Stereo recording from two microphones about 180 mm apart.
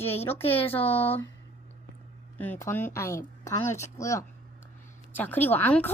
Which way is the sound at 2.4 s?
10° left (ahead or behind).